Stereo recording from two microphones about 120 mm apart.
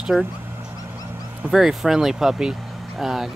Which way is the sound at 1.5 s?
5° right (ahead or behind).